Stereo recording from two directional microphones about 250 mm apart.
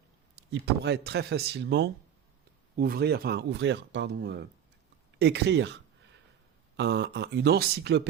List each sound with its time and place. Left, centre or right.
0.6 s speech: right